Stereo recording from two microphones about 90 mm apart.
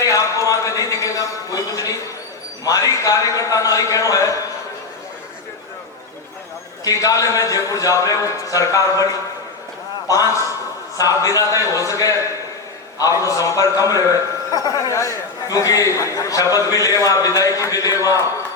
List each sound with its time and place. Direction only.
0.0 s a sound: 35° left (ahead or behind)
2.6 s a man's voice: 40° left (ahead or behind)
6.8 s a man's voice: 40° left (ahead or behind)
10.1 s a man's voice: 40° left (ahead or behind)